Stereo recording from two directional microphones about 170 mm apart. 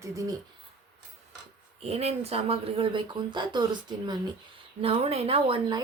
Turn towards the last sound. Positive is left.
turn(degrees=-30)  # may be behind; listen again after turning